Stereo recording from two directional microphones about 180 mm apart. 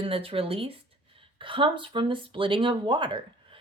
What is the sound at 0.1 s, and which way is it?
Speech, 30° right (ahead or behind).